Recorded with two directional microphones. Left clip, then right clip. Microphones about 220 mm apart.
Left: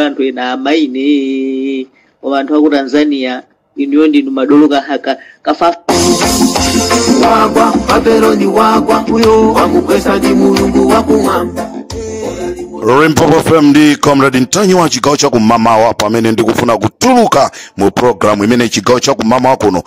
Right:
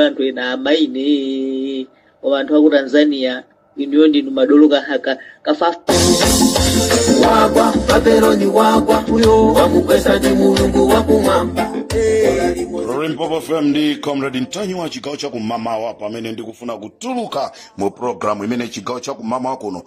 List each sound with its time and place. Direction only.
0.0 s a man's voice: 30° left (ahead or behind)
1.0 s mantra: 65° left (ahead or behind)
2.2 s a man's voice: 30° left (ahead or behind)
6.0 s music: 30° left (ahead or behind)
13.7 s speech: 45° left (ahead or behind)